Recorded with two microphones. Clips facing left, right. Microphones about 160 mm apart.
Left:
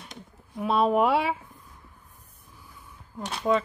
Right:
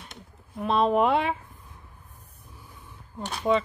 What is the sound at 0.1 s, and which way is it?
Speech, 5° left (ahead or behind).